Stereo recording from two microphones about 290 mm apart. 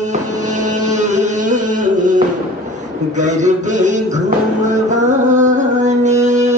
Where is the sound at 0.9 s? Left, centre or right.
Right.